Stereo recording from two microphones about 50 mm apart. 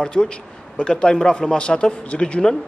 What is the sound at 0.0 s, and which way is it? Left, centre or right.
A man's voice, centre.